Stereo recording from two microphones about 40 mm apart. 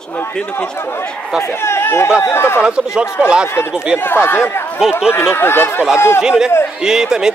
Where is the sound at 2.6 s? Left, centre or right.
Right.